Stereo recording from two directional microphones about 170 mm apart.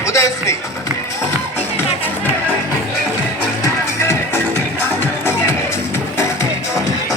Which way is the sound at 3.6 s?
15° left (ahead or behind).